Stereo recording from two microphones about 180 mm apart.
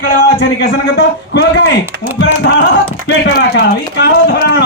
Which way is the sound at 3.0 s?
80° left.